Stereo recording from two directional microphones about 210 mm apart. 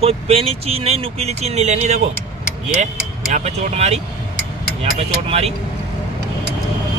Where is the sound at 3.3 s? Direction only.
30° right (ahead or behind).